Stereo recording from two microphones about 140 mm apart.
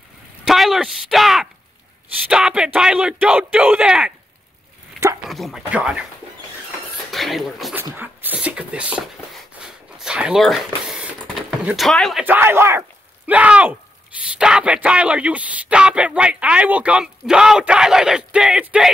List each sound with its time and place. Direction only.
0.5 s speech: centre (ahead or behind)
5.3 s speech: centre (ahead or behind)
7.1 s speech: centre (ahead or behind)
7.7 s a sound: 15° right (ahead or behind)
12.2 s speech: 15° right (ahead or behind)